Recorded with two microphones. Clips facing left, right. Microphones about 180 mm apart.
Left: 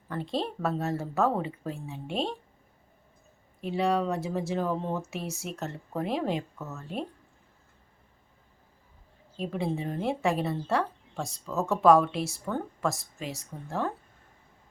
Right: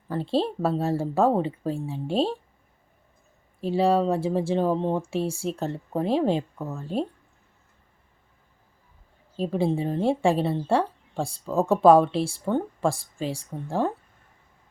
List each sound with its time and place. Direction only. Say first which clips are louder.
0.1 s a woman's voice: right 6 dB; 30° right (ahead or behind)
3.6 s speech: right 5 dB; 30° right (ahead or behind)
9.4 s a woman's voice: right 6 dB; 30° right (ahead or behind)